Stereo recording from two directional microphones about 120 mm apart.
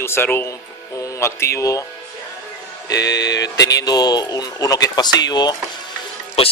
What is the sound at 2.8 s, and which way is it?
Speech, 30° left (ahead or behind).